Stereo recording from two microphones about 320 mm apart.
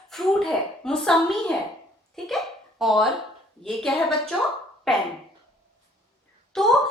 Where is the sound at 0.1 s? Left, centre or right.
Centre.